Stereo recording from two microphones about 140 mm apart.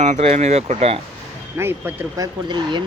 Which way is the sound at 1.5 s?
15° right (ahead or behind).